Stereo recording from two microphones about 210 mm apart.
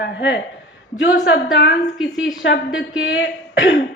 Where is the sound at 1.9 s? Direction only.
Centre (ahead or behind).